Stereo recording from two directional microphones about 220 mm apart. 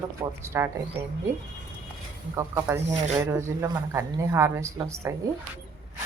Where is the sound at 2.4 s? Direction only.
10° right (ahead or behind).